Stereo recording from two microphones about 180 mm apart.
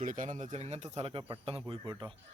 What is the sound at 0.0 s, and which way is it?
Speech, 45° right (ahead or behind).